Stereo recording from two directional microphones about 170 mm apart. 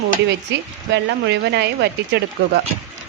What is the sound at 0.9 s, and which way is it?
Speech, 85° right.